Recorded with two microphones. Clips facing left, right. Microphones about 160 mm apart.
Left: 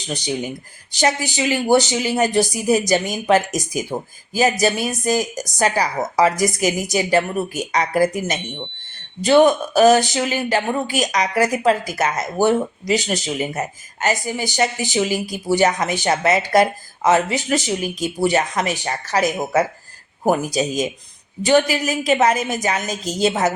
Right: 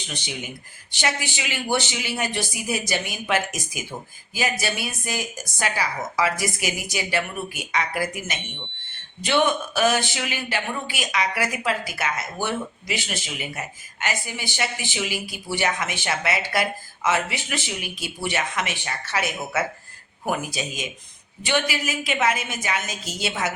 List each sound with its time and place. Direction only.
0.1 s speech: 40° left (ahead or behind)